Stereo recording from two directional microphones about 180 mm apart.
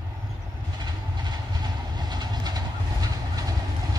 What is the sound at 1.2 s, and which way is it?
Vehicle, 25° right (ahead or behind).